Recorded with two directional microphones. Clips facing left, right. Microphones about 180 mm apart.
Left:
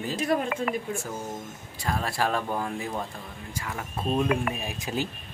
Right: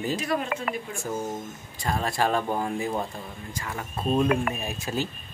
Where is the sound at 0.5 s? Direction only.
50° right (ahead or behind).